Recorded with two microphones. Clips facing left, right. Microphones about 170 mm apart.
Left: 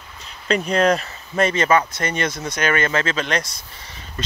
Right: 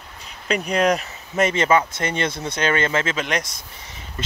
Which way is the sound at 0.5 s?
15° right (ahead or behind).